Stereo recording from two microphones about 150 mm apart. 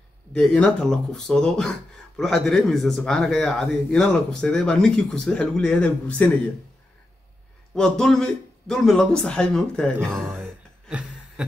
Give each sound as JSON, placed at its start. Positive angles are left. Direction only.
{"t": 0.3, "sound": "speech", "side_deg": 5}
{"t": 7.7, "sound": "speech", "side_deg": 5}
{"t": 10.2, "sound": "a sound", "side_deg": -10}